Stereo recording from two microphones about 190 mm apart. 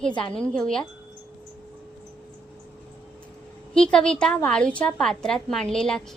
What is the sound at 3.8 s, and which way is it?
A woman's voice, 5° left (ahead or behind).